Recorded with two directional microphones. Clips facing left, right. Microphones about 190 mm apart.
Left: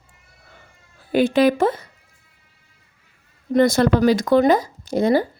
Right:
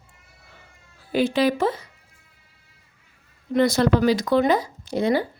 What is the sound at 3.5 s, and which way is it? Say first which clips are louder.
Speech: left 3 dB; 50° left (ahead or behind).